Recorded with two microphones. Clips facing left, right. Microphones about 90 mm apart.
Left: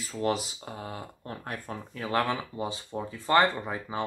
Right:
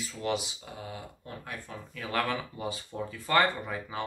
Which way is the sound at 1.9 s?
30° left (ahead or behind).